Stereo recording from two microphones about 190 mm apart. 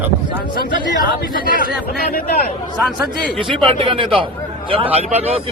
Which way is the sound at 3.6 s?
30° right (ahead or behind).